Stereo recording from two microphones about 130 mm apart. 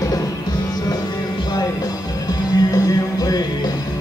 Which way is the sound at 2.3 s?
30° left (ahead or behind).